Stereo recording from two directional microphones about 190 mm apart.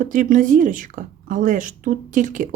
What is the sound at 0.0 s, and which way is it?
Speech, 45° right (ahead or behind).